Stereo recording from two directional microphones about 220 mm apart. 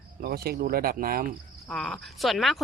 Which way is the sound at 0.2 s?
45° right (ahead or behind).